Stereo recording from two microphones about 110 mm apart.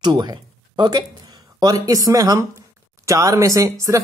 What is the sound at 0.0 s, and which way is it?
Speech, 40° right (ahead or behind).